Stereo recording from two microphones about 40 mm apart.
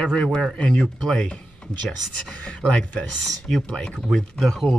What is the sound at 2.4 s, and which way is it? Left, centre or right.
Speech, left.